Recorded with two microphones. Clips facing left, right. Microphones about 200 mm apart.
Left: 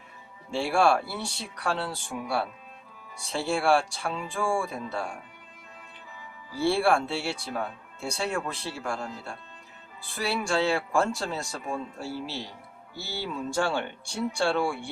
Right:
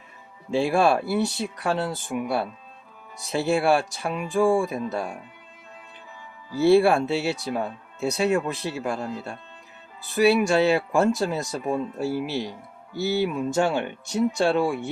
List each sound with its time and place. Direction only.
0.5 s speech: 20° right (ahead or behind)
6.6 s speech: 20° right (ahead or behind)